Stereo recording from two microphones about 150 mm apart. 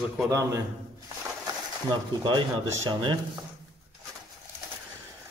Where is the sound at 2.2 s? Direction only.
30° right (ahead or behind).